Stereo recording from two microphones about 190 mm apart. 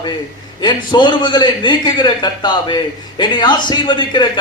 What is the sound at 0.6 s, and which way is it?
A man's voice, 25° left (ahead or behind).